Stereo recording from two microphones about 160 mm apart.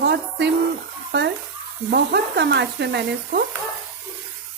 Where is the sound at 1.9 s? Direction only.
90° right.